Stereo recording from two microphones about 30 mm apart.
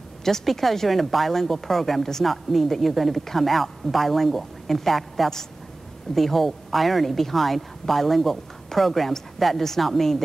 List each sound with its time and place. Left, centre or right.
0.2 s speech: centre